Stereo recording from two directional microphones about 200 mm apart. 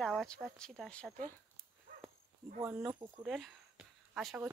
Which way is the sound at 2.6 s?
10° right (ahead or behind).